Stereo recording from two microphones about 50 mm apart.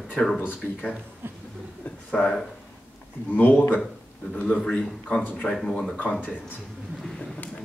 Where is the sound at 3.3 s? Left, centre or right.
Left.